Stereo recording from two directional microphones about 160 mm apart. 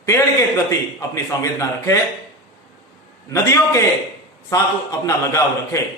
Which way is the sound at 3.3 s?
20° left (ahead or behind).